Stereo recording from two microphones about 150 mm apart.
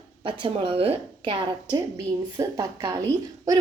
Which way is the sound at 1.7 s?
25° right (ahead or behind).